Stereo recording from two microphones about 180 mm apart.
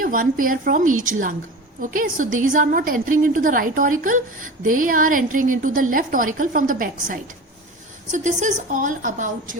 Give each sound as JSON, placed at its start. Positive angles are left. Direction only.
{"t": 0.0, "sound": "a woman's voice", "side_deg": -50}